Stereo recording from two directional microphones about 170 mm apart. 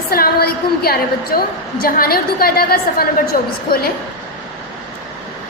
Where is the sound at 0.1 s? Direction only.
65° left (ahead or behind).